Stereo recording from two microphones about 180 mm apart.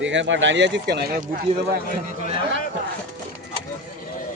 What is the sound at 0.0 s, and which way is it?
Speech, 90° right.